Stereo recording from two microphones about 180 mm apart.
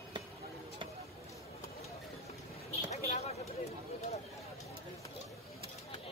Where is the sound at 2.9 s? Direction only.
35° left (ahead or behind).